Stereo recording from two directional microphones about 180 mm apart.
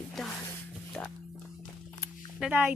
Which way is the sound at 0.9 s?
5° left (ahead or behind).